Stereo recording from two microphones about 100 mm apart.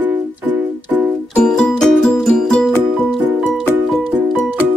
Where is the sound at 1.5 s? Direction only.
5° left (ahead or behind).